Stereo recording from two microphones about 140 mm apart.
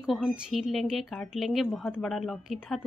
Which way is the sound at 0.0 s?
Centre (ahead or behind).